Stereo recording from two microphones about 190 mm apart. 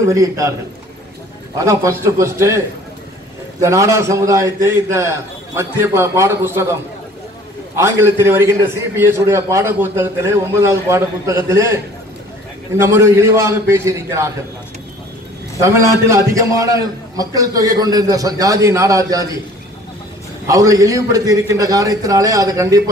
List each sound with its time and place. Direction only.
0.1 s a man's voice: 15° right (ahead or behind)
1.6 s a man's voice: 15° right (ahead or behind)
3.6 s a man's voice: 15° right (ahead or behind)
15.6 s a man's voice: 15° right (ahead or behind)
20.4 s a man's voice: 15° right (ahead or behind)